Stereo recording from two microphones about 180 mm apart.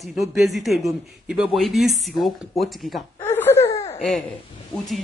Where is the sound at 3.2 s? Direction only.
10° left (ahead or behind).